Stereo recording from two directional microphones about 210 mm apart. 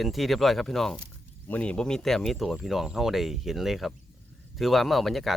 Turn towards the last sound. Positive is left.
turn(degrees=0)  # may be behind; listen again after turning